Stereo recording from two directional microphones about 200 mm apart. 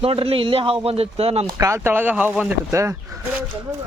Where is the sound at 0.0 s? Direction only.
30° right (ahead or behind).